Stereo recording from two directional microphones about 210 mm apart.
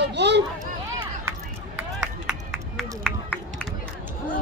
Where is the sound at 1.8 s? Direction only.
Centre (ahead or behind).